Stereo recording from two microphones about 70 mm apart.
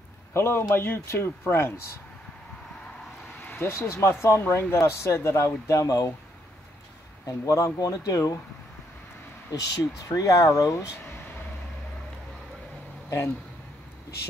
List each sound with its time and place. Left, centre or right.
0.3 s speech: left
3.4 s vehicle: left
3.7 s speech: left
5.7 s speech: left
7.2 s speech: left
9.5 s speech: left